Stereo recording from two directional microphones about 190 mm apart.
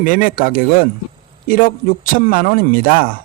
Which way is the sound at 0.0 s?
45° left (ahead or behind).